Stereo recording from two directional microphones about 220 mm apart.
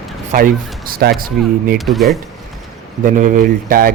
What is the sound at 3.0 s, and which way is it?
Speech, 35° right (ahead or behind).